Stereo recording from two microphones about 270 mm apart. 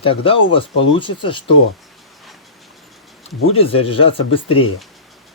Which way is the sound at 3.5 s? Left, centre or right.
Left.